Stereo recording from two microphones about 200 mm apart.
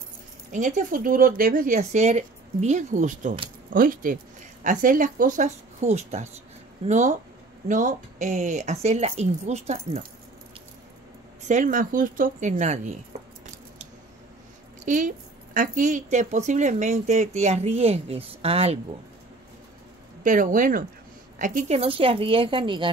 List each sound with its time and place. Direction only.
0.5 s speech: 40° right (ahead or behind)
11.4 s speech: 40° right (ahead or behind)
14.9 s speech: 40° right (ahead or behind)
20.2 s a woman's voice: 40° right (ahead or behind); by 22.8 s 25° right (ahead or behind)